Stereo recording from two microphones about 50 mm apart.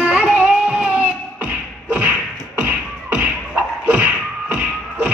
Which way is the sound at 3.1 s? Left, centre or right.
Right.